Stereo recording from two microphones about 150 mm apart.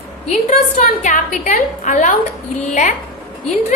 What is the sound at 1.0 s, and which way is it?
A woman's voice, 60° left (ahead or behind).